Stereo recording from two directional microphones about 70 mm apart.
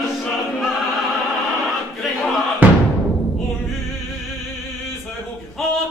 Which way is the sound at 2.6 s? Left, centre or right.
Right.